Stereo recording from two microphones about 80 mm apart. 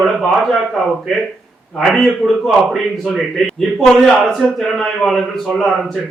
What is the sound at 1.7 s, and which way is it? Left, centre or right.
A man's voice, centre.